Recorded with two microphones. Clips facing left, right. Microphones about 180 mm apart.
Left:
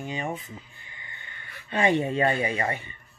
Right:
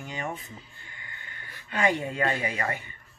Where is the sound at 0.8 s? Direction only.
20° left (ahead or behind).